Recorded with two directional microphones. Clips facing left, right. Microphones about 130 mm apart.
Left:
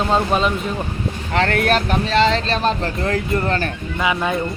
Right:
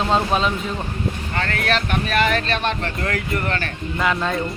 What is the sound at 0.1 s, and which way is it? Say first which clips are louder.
Speech: left 2 dB; centre (ahead or behind).